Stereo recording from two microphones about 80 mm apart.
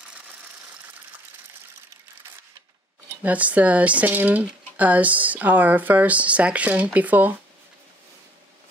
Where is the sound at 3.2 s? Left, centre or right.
Centre.